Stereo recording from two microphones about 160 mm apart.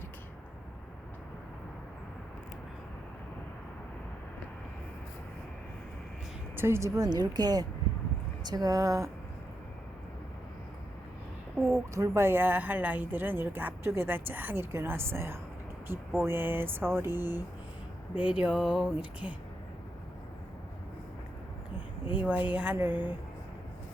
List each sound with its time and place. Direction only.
6.6 s speech: 15° right (ahead or behind)
11.9 s speech: 15° right (ahead or behind)
22.0 s speech: 10° right (ahead or behind)